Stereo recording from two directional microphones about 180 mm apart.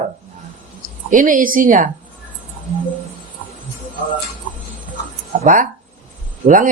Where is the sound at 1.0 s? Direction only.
50° right (ahead or behind).